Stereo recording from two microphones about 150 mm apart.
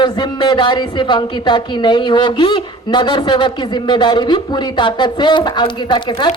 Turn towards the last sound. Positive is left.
turn(degrees=30)  # may be behind; listen again after turning